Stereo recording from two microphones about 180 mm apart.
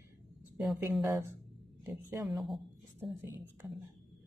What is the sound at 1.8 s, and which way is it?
Speech, 15° right (ahead or behind).